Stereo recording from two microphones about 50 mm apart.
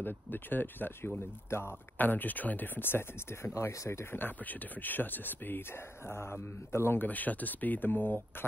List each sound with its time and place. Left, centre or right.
0.0 s speech: left
1.5 s a man's voice: left
2.0 s speech: left
3.7 s speech: left
4.0 s a man's voice: left
7.0 s speech: left